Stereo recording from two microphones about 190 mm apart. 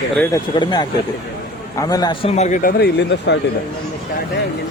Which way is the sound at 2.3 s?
40° left (ahead or behind).